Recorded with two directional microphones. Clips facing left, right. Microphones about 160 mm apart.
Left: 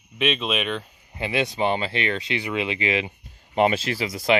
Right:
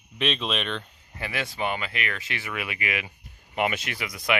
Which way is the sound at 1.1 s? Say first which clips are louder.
Left 7 dB; 20° left (ahead or behind).